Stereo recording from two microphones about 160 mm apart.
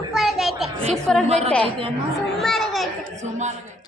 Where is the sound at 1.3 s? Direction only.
40° right (ahead or behind).